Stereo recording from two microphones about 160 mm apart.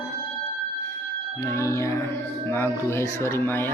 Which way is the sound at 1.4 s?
20° left (ahead or behind).